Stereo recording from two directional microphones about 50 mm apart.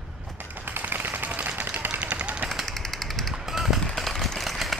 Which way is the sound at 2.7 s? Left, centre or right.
Centre.